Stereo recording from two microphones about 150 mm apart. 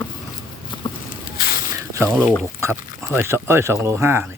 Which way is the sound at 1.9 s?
15° right (ahead or behind).